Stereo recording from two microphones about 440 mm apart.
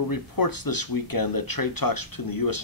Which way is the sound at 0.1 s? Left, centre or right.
Left.